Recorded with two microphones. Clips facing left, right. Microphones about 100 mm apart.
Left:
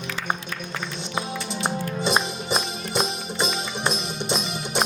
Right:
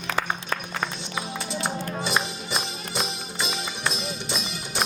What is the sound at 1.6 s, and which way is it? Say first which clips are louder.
Music: left 5 dB; 20° left (ahead or behind).